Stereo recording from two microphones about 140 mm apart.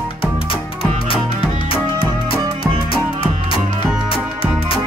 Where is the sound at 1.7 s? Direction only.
40° left (ahead or behind).